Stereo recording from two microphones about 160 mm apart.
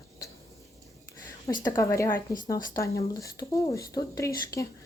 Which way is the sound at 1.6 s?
20° left (ahead or behind).